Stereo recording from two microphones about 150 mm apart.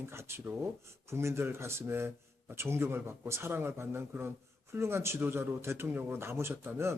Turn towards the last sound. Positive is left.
turn(degrees=-15)  # may be behind; listen again after turning